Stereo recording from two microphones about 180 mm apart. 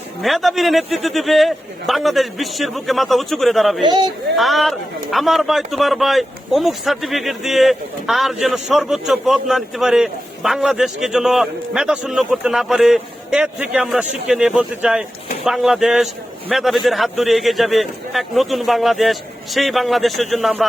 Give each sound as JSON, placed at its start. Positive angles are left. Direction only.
{"t": 0.2, "sound": "a man's voice", "side_deg": 0}
{"t": 3.8, "sound": "speech", "side_deg": -25}
{"t": 4.4, "sound": "a man's voice", "side_deg": 0}